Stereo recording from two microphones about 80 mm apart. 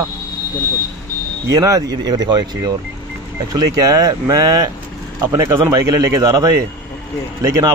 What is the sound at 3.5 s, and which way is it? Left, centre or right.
Speech, right.